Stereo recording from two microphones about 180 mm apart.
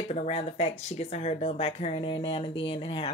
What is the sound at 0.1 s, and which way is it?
Speech, 35° left (ahead or behind).